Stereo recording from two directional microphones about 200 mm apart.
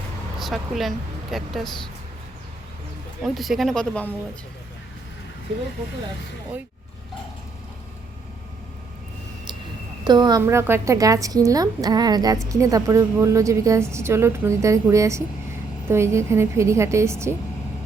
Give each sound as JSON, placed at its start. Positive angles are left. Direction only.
{"t": 0.3, "sound": "speech", "side_deg": 0}
{"t": 3.2, "sound": "speech", "side_deg": 0}
{"t": 10.0, "sound": "a woman's voice", "side_deg": -20}